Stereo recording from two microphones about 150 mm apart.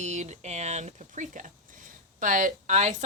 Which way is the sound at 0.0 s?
50° right (ahead or behind).